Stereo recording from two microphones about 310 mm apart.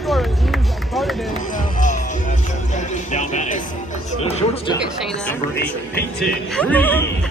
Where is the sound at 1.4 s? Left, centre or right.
Left.